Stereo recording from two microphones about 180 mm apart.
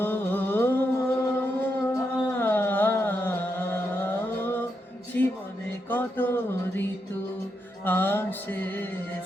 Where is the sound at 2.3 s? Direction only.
10° left (ahead or behind).